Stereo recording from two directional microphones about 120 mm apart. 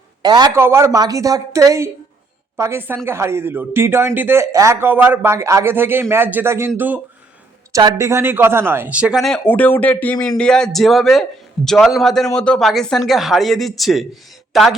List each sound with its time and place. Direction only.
0.2 s a man's voice: 35° right (ahead or behind)
0.5 s speech: 20° right (ahead or behind)
7.7 s speech: 30° right (ahead or behind); by 9.2 s 10° right (ahead or behind)
9.5 s a man's voice: 15° left (ahead or behind)